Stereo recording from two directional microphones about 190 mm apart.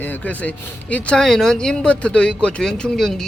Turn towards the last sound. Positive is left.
turn(degrees=0)  # may be behind; listen again after turning